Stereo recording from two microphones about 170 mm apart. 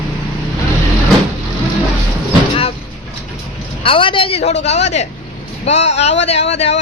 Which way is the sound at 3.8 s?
30° left (ahead or behind).